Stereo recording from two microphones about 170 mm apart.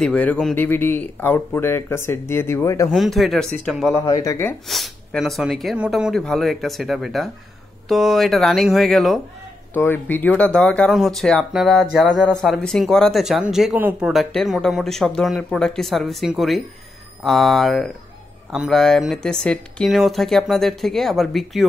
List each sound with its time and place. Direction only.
0.0 s speech: 5° left (ahead or behind)
2.9 s speech: centre (ahead or behind)
3.9 s speech: 20° left (ahead or behind)
4.6 s speech: centre (ahead or behind)
9.8 s speech: 10° left (ahead or behind)